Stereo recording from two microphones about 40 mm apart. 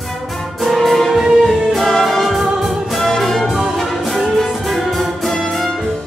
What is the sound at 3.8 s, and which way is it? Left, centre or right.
Music, centre.